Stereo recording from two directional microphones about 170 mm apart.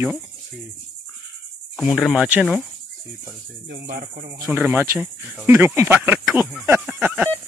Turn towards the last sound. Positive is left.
turn(degrees=-10)  # may be behind; listen again after turning